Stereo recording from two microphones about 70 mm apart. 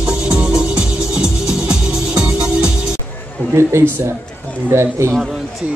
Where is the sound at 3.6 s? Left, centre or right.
Right.